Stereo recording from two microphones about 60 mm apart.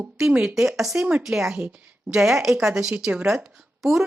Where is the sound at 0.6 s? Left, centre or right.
Centre.